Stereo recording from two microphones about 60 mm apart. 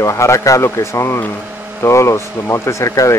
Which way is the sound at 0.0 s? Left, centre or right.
Left.